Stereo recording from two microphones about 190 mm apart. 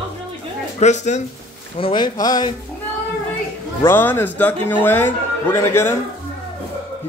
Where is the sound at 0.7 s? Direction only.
40° left (ahead or behind).